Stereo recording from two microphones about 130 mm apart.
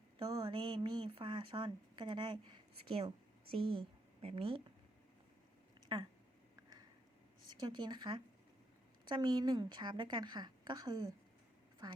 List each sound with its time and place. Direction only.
0.2 s speech: 30° right (ahead or behind); by 4.6 s 45° right (ahead or behind)
5.9 s speech: 40° right (ahead or behind)
7.5 s speech: 35° right (ahead or behind)